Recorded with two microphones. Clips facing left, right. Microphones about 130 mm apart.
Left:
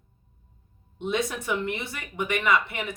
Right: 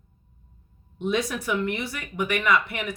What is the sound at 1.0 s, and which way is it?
Speech, 25° left (ahead or behind).